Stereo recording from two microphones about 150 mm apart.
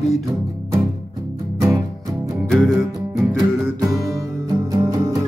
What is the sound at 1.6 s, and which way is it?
Music, 20° right (ahead or behind).